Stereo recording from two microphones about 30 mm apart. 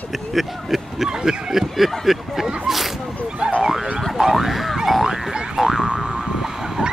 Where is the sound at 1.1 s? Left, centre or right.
Centre.